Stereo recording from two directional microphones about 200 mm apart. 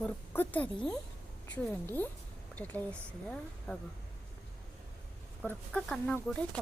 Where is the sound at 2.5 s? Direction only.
10° left (ahead or behind).